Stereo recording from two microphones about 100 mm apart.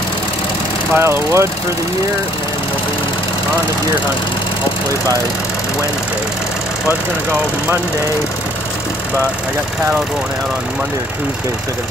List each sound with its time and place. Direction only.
0.9 s speech: 25° right (ahead or behind)